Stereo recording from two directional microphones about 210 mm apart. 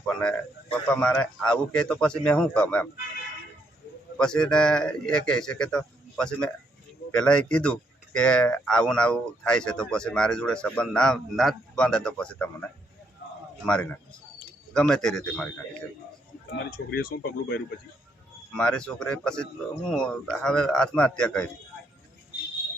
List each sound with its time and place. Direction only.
0.2 s speech: 5° left (ahead or behind)
4.2 s speech: 5° left (ahead or behind)
16.6 s speech: 45° left (ahead or behind)
18.5 s speech: 5° left (ahead or behind)